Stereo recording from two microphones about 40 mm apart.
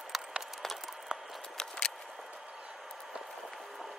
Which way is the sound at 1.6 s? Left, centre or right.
Centre.